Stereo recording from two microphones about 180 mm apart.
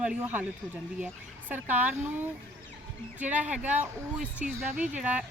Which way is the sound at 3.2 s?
10° right (ahead or behind).